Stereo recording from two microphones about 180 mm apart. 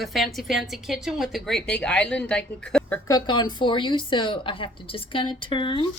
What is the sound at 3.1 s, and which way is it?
A woman's voice, 25° left (ahead or behind).